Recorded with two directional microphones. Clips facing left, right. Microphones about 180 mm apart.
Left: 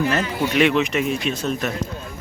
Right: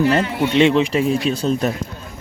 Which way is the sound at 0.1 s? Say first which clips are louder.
Right 4 dB; 25° right (ahead or behind).